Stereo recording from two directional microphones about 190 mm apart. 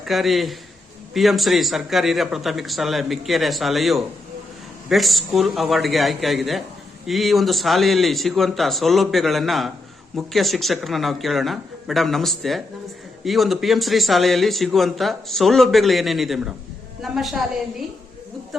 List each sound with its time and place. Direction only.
0.0 s a man's voice: centre (ahead or behind)